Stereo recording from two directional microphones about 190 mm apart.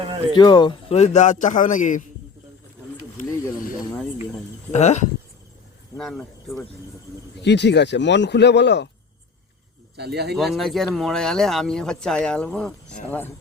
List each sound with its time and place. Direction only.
0.0 s speech: 30° right (ahead or behind)
0.3 s a man's voice: 25° left (ahead or behind); by 2.0 s 40° left (ahead or behind)
3.8 s cricket: centre (ahead or behind)
4.7 s a man's voice: 35° left (ahead or behind)
6.0 s speech: centre (ahead or behind)
7.4 s speech: 65° left (ahead or behind)
10.0 s speech: 60° right (ahead or behind)
10.3 s speech: centre (ahead or behind)